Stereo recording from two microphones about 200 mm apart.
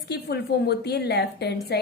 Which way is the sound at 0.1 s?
55° left (ahead or behind).